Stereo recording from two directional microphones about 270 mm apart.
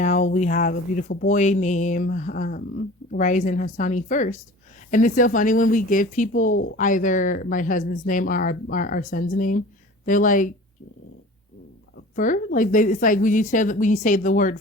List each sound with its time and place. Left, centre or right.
0.0 s speech: left
12.1 s speech: left